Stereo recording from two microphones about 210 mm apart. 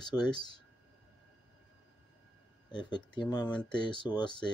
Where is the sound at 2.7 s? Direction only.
20° left (ahead or behind).